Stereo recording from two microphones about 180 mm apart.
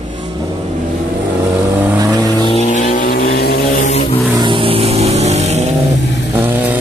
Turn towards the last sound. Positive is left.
turn(degrees=-10)  # may be behind; listen again after turning